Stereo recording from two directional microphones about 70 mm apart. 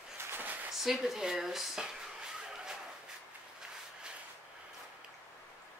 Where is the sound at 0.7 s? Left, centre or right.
Centre.